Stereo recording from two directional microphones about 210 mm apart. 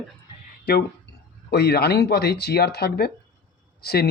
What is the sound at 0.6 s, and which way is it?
Speech, 50° left (ahead or behind).